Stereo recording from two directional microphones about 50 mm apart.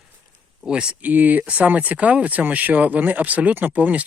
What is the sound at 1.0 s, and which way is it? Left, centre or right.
Speech, right.